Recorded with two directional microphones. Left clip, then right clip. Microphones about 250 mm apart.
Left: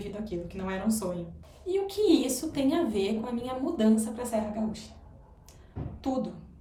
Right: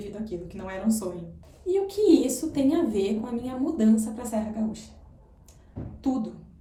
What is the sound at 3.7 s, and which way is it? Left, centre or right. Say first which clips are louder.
Speech: right 1 dB; centre.